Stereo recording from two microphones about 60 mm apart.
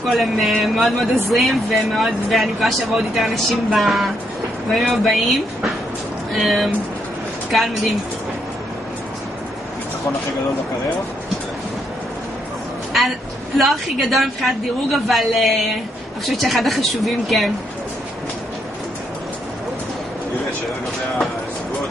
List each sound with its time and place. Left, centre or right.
0.0 s speech: centre
13.6 s speech: centre